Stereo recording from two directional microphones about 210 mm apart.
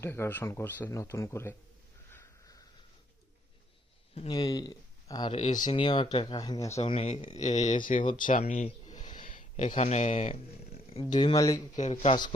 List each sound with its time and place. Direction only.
0.0 s speech: 10° left (ahead or behind)
2.0 s a sound: 10° left (ahead or behind)
4.3 s speech: 20° left (ahead or behind)
5.6 s speech: 20° left (ahead or behind)
6.7 s speech: 30° left (ahead or behind)
11.1 s speech: 20° left (ahead or behind)
11.8 s speech: 35° left (ahead or behind)